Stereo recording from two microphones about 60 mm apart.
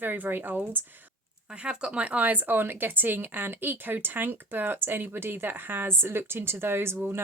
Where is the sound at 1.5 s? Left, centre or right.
Centre.